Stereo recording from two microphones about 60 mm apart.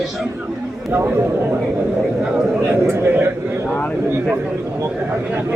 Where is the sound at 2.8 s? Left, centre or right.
Right.